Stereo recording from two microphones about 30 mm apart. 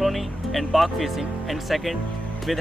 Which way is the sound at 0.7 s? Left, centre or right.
Centre.